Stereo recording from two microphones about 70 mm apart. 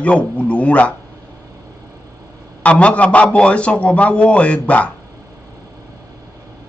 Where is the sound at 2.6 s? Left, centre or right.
Centre.